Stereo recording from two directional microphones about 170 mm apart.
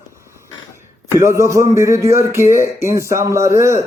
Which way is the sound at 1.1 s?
15° right (ahead or behind).